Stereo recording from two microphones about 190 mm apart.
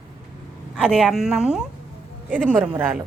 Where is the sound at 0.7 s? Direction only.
5° right (ahead or behind).